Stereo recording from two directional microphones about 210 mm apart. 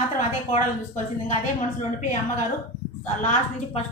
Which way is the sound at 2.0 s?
35° left (ahead or behind).